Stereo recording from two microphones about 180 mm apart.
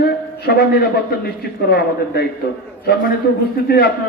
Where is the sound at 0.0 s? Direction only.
60° left (ahead or behind).